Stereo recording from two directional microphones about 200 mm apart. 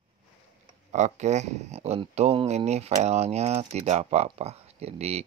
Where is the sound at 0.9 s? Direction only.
35° right (ahead or behind).